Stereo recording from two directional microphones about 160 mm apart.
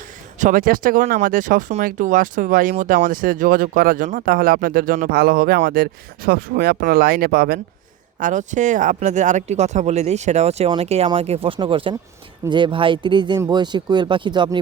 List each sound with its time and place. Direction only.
0.3 s speech: 55° right (ahead or behind); by 7.6 s 80° right
8.2 s speech: 50° right (ahead or behind); by 14.6 s 30° right (ahead or behind)